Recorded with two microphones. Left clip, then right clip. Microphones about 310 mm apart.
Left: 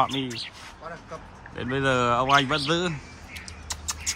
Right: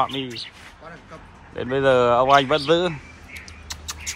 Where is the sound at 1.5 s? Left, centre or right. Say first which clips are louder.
Right 6 dB; centre.